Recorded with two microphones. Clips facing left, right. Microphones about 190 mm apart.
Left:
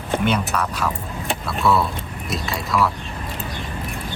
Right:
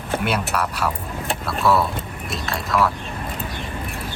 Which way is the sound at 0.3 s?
5° right (ahead or behind).